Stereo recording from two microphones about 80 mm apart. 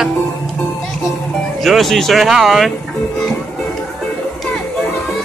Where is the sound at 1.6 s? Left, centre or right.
Centre.